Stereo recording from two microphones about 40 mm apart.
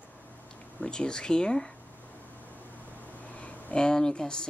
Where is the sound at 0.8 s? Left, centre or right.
Left.